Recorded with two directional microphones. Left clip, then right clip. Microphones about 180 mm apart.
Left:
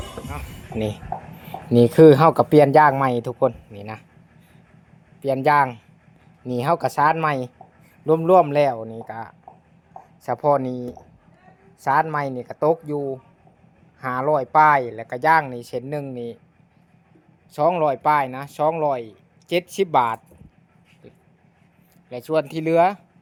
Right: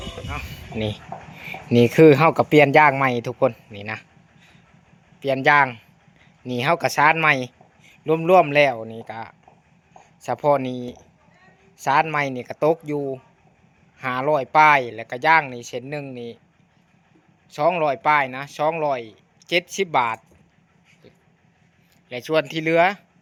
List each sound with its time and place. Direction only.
0.3 s speech: centre (ahead or behind)
11.8 s speech: 5° right (ahead or behind)
12.6 s speech: 30° right (ahead or behind)
14.0 s speech: centre (ahead or behind)
17.5 s speech: 5° left (ahead or behind)
22.1 s speech: centre (ahead or behind)